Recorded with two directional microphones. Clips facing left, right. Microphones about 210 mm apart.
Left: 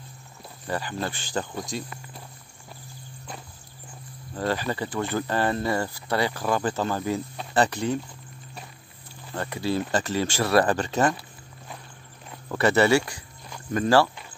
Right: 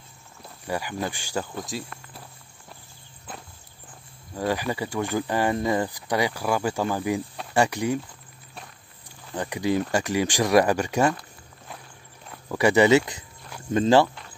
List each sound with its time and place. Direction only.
0.7 s speech: 10° right (ahead or behind)
4.4 s speech: 10° right (ahead or behind)
9.3 s speech: 15° right (ahead or behind)
12.5 s speech: 15° right (ahead or behind)